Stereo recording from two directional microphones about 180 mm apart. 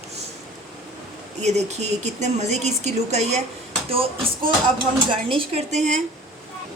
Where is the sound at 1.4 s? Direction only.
40° right (ahead or behind).